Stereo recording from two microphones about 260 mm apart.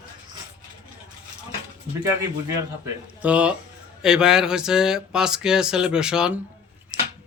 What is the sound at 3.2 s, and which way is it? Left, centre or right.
A man's voice, centre.